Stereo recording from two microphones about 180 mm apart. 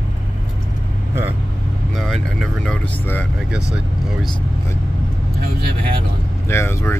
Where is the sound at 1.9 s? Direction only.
Centre (ahead or behind).